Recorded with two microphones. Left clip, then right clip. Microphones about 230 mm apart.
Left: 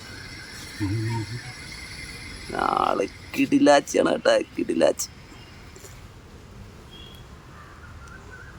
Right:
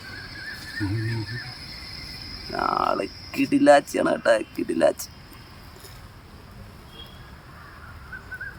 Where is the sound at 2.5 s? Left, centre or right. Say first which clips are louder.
Left 1 dB; centre.